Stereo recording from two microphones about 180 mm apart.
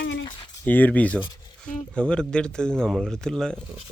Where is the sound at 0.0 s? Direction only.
90° left.